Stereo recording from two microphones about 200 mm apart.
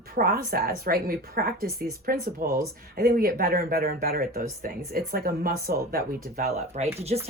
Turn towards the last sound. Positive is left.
turn(degrees=-35)  # may be behind; listen again after turning